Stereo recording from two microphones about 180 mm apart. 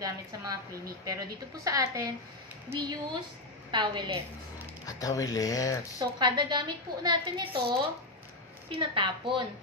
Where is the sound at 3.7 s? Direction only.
25° right (ahead or behind).